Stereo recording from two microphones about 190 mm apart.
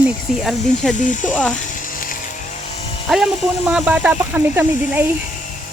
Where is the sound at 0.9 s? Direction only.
40° left (ahead or behind).